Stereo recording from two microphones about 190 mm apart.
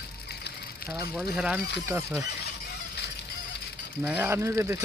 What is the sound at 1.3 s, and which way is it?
Speech, 5° right (ahead or behind).